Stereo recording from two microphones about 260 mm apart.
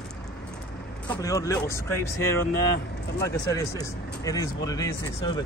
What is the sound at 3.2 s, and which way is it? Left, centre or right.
Speech, centre.